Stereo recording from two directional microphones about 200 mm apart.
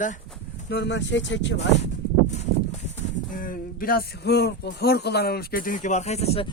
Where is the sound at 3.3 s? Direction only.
45° left (ahead or behind).